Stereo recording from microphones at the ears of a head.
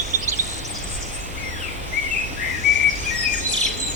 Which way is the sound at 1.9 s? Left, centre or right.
Left.